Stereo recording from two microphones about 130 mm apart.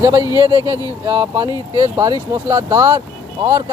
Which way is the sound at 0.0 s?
25° right (ahead or behind).